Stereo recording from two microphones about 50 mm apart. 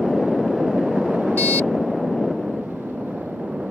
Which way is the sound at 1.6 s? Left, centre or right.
Centre.